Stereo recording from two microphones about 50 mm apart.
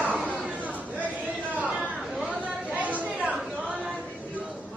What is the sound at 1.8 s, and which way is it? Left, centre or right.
Chatter, centre.